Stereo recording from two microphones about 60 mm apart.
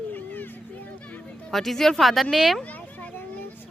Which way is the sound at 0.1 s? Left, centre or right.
Left.